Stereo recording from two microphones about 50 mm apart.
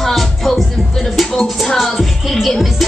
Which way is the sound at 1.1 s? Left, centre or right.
Centre.